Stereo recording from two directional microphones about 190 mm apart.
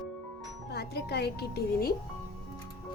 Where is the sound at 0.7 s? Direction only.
60° left (ahead or behind).